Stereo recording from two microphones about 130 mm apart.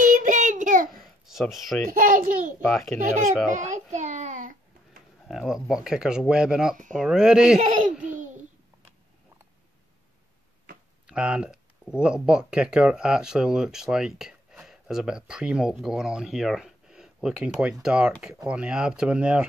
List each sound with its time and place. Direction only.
0.0 s child singing: 85° right
1.2 s speech: centre (ahead or behind)
1.9 s a child's voice: 90° right
2.6 s speech: 5° left (ahead or behind)
3.5 s child singing: 70° right (ahead or behind)
5.3 s speech: 5° right (ahead or behind)
11.1 s speech: 10° right (ahead or behind)